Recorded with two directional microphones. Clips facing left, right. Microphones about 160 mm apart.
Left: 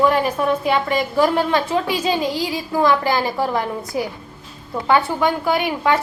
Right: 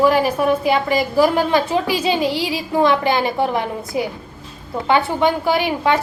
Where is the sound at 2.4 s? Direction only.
25° right (ahead or behind).